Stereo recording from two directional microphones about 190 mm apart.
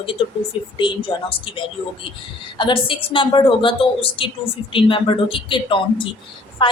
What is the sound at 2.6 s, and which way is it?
A woman's voice, 25° left (ahead or behind).